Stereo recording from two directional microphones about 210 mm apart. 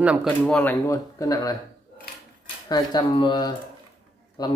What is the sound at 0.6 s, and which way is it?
Speech, 10° left (ahead or behind).